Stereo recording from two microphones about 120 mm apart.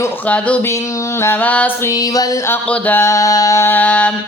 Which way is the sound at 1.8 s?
30° left (ahead or behind).